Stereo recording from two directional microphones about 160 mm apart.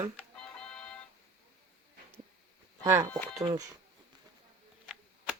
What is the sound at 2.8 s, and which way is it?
Speech, 20° right (ahead or behind).